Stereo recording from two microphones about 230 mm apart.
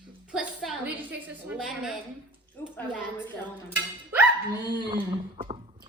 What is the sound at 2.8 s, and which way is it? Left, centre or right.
Speech, centre.